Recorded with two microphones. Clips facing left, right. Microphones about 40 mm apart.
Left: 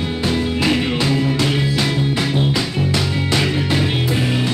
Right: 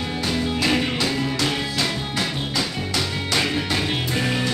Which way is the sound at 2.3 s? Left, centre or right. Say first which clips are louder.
Left 6 dB; left.